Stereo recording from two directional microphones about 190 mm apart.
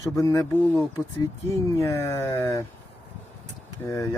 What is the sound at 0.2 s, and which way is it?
Speech, 20° left (ahead or behind).